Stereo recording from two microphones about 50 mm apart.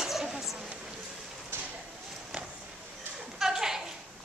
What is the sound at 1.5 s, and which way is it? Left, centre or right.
Clip-clop, right.